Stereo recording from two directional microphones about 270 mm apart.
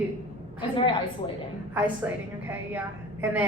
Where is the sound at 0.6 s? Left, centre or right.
Centre.